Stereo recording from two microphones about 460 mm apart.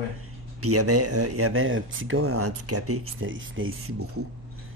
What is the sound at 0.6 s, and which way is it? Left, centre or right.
Speech, right.